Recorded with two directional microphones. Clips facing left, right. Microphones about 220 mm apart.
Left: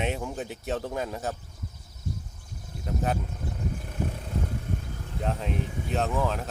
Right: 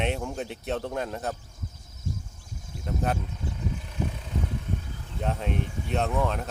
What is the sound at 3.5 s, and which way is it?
Vehicle, 50° left (ahead or behind).